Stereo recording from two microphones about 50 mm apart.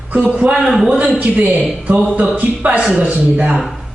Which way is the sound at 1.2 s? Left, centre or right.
Right.